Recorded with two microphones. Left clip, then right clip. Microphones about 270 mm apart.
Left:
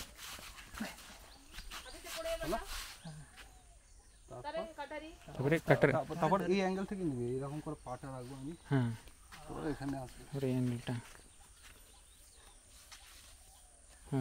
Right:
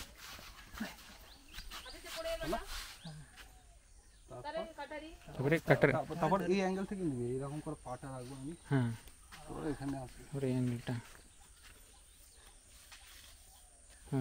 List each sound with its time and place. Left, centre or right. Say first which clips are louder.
0.0 s dog: left 2 dB; centre
4.4 s speech: left 1 dB; centre